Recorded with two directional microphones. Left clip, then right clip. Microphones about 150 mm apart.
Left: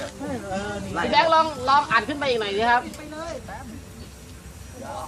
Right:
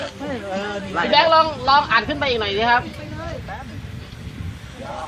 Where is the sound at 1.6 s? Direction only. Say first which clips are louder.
Right 3 dB; 30° right (ahead or behind).